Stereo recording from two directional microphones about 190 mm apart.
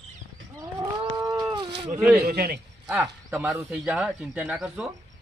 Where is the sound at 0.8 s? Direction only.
20° right (ahead or behind).